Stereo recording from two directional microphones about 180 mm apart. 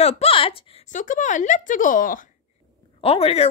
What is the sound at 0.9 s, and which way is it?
Speech, 45° left (ahead or behind).